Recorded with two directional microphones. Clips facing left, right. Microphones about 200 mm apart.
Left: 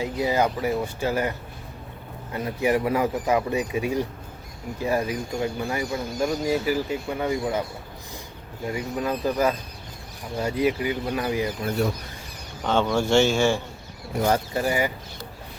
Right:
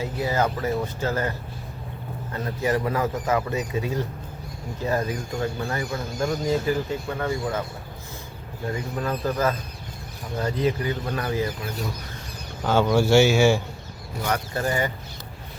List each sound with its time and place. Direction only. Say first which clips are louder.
0.0 s speech: left 2 dB; 15° left (ahead or behind)
2.3 s speech: left 2 dB; 15° left (ahead or behind)
8.6 s speech: left 1 dB; 10° left (ahead or behind)
12.6 s speech: right 2 dB; 5° right (ahead or behind)
14.5 s speech: left 1 dB; 10° left (ahead or behind)